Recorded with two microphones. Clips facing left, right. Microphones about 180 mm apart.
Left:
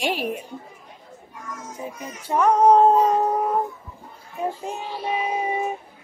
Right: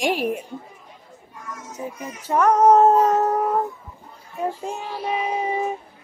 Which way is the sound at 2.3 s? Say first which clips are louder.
Right 1 dB; 10° left (ahead or behind).